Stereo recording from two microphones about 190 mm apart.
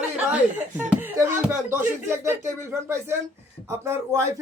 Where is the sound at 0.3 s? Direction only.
10° right (ahead or behind).